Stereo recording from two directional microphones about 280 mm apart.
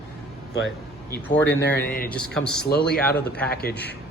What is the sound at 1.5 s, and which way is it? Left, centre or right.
Speech, centre.